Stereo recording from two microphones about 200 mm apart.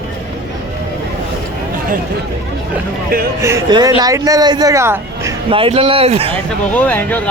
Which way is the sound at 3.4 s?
15° right (ahead or behind).